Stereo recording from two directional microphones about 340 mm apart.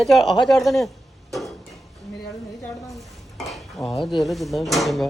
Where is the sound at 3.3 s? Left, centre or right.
Centre.